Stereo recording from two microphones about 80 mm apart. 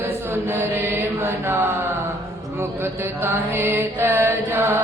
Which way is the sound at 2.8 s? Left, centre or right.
Right.